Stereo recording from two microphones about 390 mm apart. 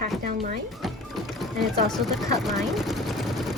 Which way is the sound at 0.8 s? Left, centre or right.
Centre.